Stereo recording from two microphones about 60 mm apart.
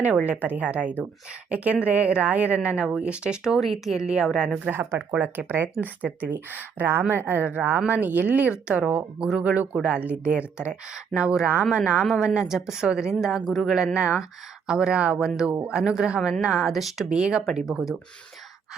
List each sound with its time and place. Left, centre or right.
0.3 s a woman's voice: right; by 4.5 s centre
4.7 s a woman's voice: right; by 11.6 s centre
12.0 s a woman's voice: centre
13.7 s a woman's voice: centre